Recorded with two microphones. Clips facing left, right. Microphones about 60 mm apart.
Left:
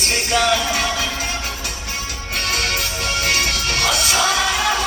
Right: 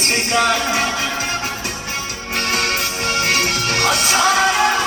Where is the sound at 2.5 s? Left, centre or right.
Right.